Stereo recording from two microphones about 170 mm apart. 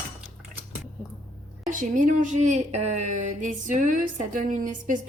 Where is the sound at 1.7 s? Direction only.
50° right (ahead or behind).